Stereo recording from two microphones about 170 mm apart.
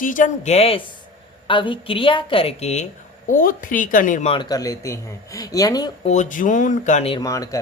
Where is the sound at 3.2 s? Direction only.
55° left (ahead or behind).